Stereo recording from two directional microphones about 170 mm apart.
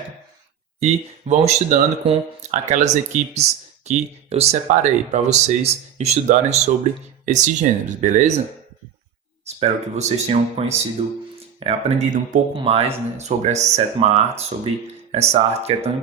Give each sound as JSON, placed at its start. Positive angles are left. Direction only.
{"t": 1.3, "sound": "speech", "side_deg": -40}
{"t": 9.6, "sound": "speech", "side_deg": -40}